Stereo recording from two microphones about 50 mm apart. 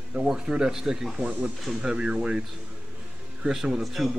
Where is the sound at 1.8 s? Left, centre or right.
Right.